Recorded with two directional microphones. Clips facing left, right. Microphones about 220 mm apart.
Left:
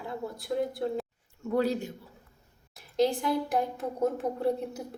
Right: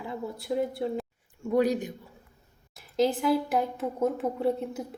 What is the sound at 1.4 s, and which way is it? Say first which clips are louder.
Speech: right 3 dB; 15° right (ahead or behind).